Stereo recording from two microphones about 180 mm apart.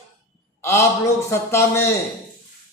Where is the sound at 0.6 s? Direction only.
15° left (ahead or behind).